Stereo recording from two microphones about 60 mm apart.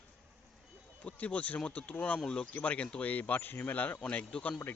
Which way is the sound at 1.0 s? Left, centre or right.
Left.